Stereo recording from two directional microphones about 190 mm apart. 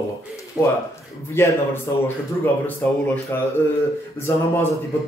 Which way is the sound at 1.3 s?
10° left (ahead or behind).